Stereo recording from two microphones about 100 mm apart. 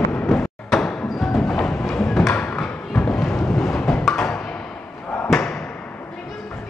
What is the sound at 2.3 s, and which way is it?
Thump, 15° left (ahead or behind).